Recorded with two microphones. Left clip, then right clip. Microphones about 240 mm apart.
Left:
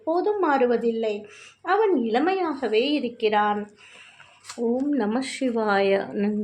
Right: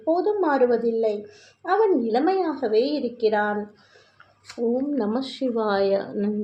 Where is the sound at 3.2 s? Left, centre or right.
Left.